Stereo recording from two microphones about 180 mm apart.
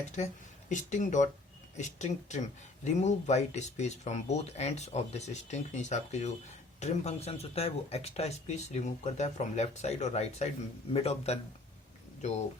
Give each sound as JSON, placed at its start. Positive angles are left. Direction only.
{"t": 0.2, "sound": "speech", "side_deg": 40}